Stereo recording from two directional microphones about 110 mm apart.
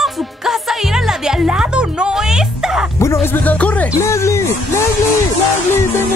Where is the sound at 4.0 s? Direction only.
25° left (ahead or behind).